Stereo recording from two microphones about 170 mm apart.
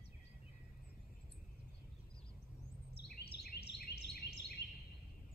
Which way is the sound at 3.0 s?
70° left (ahead or behind).